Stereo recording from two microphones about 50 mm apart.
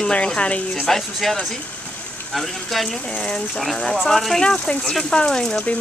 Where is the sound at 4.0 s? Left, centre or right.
Centre.